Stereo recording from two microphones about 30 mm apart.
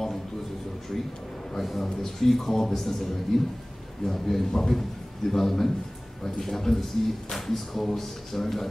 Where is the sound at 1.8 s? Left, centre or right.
Centre.